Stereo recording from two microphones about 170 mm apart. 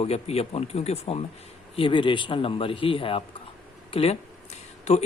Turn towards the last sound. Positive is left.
turn(degrees=40)  # may be behind; listen again after turning